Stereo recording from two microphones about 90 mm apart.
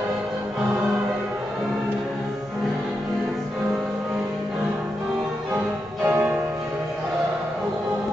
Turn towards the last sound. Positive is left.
turn(degrees=-20)  # may be behind; listen again after turning